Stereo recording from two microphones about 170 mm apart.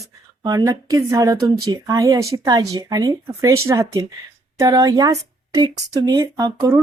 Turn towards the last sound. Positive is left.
turn(degrees=-15)  # may be behind; listen again after turning